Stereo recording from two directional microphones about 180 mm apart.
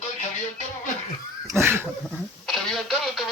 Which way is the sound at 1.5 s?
15° right (ahead or behind).